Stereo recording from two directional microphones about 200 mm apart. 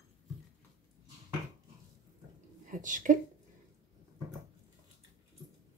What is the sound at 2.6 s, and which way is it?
Speech, 40° right (ahead or behind).